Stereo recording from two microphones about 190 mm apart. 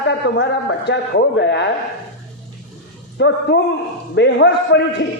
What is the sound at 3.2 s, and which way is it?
A man's voice, 60° left (ahead or behind).